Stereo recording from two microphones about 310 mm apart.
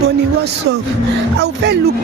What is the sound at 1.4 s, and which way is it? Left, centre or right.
Speech, right.